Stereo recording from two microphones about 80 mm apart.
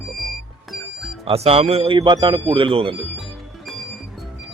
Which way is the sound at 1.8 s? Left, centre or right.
Right.